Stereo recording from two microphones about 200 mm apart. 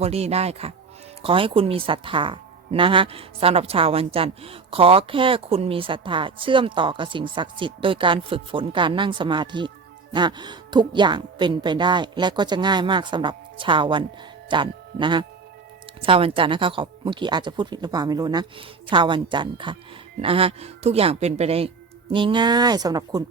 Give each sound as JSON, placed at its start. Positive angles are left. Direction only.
{"t": 0.0, "sound": "a woman's voice", "side_deg": -30}